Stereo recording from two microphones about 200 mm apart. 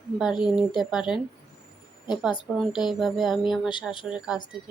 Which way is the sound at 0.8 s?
5° right (ahead or behind).